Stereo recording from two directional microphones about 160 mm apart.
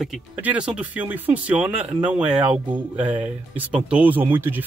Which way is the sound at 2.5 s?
30° right (ahead or behind).